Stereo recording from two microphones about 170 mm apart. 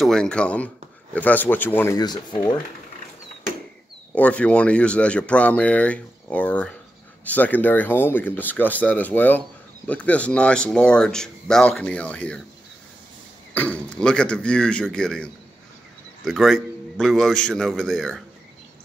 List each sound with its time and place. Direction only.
0.0 s speech: 5° left (ahead or behind)
2.0 s speech: 25° left (ahead or behind)
4.1 s speech: 5° left (ahead or behind)
13.6 s speech: 10° left (ahead or behind)